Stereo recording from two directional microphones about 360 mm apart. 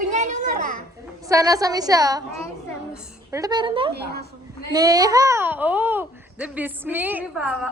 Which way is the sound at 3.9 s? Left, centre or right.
Right.